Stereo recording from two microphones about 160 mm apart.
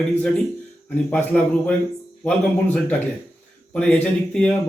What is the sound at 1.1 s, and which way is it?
Speech, 10° left (ahead or behind).